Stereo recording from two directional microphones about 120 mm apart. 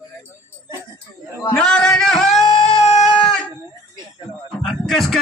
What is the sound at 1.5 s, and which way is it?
Music, 5° left (ahead or behind).